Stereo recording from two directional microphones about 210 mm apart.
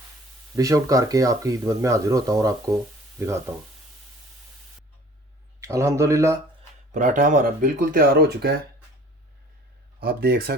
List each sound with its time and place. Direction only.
0.5 s speech: 15° right (ahead or behind)
5.5 s speech: 15° right (ahead or behind)
6.9 s speech: 35° right (ahead or behind)
10.0 s speech: 45° right (ahead or behind)